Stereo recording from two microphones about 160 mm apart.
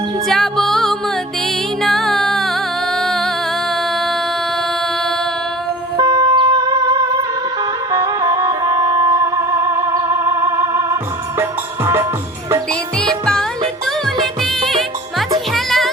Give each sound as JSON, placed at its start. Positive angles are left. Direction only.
{"t": 0.3, "sound": "music", "side_deg": 5}
{"t": 6.0, "sound": "music", "side_deg": -25}
{"t": 14.4, "sound": "music", "side_deg": 0}